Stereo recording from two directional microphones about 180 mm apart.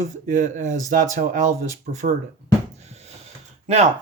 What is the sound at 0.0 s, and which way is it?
Speech, 45° right (ahead or behind).